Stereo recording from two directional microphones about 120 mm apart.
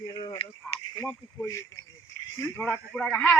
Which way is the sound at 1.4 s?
25° left (ahead or behind).